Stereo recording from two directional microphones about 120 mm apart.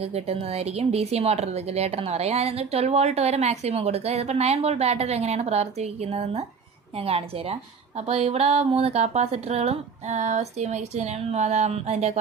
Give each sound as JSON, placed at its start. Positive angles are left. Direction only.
{"t": 0.0, "sound": "speech", "side_deg": -55}